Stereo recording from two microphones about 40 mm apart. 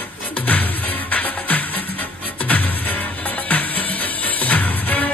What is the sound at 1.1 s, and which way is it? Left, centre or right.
Music, left.